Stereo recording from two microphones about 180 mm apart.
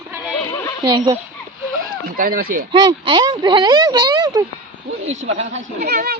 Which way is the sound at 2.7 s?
25° right (ahead or behind).